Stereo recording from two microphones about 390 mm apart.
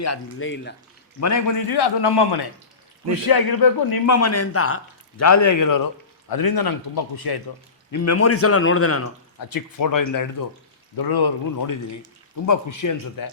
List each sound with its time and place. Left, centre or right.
0.0 s a man's voice: left
1.2 s a man's voice: left
1.7 s a man's voice: left
3.2 s speech: left
4.1 s a man's voice: left
7.9 s a man's voice: left
9.4 s speech: left
10.9 s a man's voice: left